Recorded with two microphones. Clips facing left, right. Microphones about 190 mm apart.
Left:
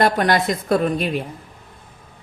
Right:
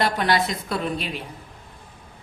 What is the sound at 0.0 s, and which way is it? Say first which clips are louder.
Speech: left 4 dB; 50° left (ahead or behind).